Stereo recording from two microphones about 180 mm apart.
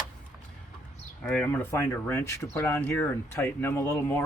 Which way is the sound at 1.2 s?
5° left (ahead or behind).